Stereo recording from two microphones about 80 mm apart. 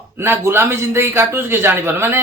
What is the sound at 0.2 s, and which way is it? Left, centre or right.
A man's voice, right.